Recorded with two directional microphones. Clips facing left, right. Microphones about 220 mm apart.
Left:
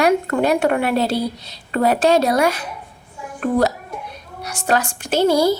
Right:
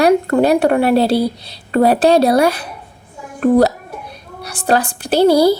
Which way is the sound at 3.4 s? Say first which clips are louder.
Right 6 dB; 35° right (ahead or behind).